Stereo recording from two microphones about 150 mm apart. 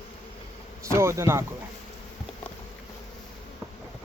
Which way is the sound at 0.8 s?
20° right (ahead or behind).